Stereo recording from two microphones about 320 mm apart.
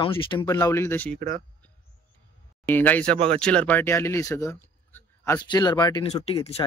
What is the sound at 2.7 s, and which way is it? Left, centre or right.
Speech, centre.